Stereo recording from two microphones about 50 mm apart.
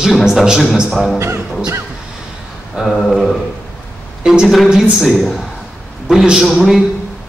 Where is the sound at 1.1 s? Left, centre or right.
Right.